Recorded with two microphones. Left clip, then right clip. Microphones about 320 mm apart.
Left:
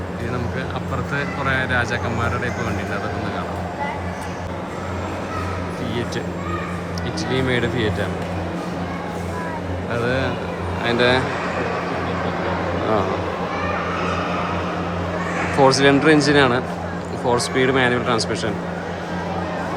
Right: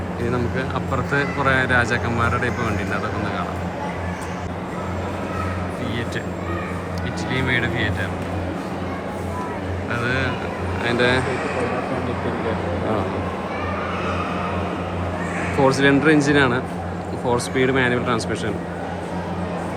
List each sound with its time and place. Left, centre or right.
1.1 s speech: centre
7.3 s speech: centre
9.9 s speech: centre
15.6 s speech: centre